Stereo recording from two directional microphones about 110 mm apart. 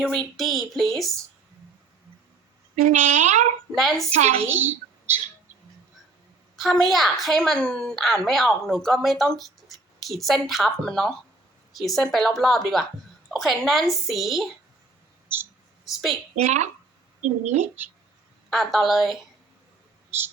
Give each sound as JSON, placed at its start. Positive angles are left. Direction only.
{"t": 0.0, "sound": "a woman's voice", "side_deg": 5}
{"t": 2.8, "sound": "speech", "side_deg": -90}
{"t": 3.8, "sound": "a woman's voice", "side_deg": 0}
{"t": 4.1, "sound": "speech", "side_deg": -90}
{"t": 4.4, "sound": "a child's voice", "side_deg": -20}
{"t": 6.6, "sound": "a woman's voice", "side_deg": 0}
{"t": 15.8, "sound": "a woman's voice", "side_deg": 0}
{"t": 16.4, "sound": "speech", "side_deg": -90}
{"t": 18.5, "sound": "a woman's voice", "side_deg": 0}